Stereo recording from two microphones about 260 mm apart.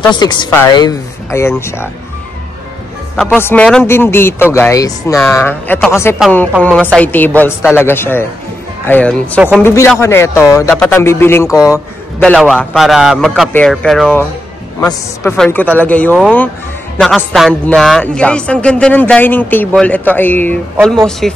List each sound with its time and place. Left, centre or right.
0.1 s a man's voice: centre
3.2 s a man's voice: centre
12.2 s a man's voice: centre